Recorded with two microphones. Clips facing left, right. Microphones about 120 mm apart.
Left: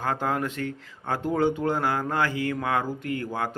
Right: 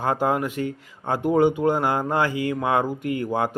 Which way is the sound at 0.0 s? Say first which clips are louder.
Right 4 dB; 15° right (ahead or behind).